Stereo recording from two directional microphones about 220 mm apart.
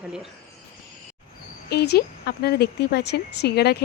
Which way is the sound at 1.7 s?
45° left (ahead or behind).